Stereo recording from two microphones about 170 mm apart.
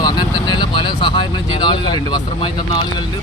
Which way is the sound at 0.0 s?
25° left (ahead or behind).